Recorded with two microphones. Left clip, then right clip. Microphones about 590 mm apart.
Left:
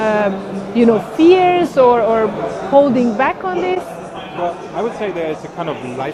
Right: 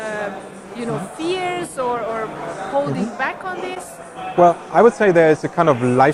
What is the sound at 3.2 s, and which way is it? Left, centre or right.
Speech, left.